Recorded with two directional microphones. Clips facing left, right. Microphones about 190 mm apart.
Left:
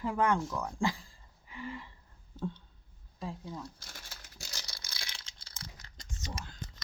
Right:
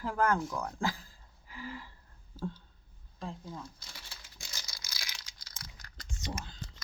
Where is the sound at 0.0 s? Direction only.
Centre (ahead or behind).